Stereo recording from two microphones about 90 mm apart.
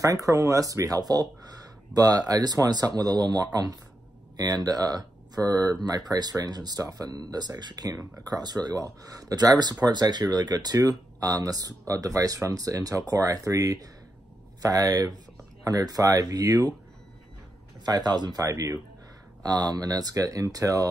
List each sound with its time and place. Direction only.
0.0 s speech: 40° right (ahead or behind)
17.8 s speech: 50° right (ahead or behind)